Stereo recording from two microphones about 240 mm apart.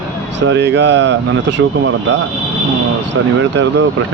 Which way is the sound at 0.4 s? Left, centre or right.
Right.